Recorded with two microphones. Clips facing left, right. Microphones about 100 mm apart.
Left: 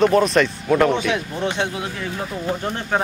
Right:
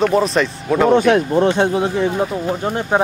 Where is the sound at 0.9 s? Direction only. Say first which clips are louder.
Right 10 dB; 45° right (ahead or behind).